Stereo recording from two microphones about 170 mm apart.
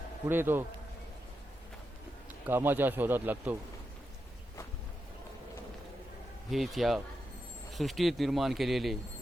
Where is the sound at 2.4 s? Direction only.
10° right (ahead or behind).